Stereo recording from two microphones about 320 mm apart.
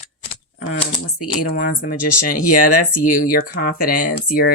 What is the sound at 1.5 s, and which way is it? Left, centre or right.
Speech, left.